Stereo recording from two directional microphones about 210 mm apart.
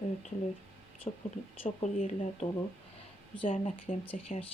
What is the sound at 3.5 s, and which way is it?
Speech, 30° left (ahead or behind).